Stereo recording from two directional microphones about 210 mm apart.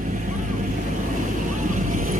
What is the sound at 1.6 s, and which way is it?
Vehicle, 40° right (ahead or behind).